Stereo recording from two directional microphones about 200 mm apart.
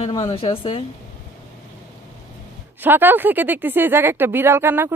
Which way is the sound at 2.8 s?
10° right (ahead or behind).